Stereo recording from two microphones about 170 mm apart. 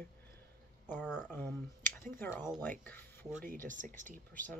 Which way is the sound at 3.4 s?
50° right (ahead or behind).